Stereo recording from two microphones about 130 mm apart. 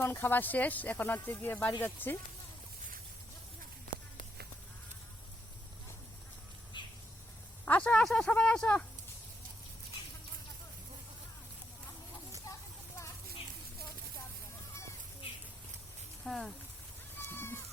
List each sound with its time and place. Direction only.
0.0 s speech: 20° left (ahead or behind)
6.8 s bird: 35° left (ahead or behind)
7.6 s speech: 10° left (ahead or behind)
16.2 s a sound: 5° left (ahead or behind)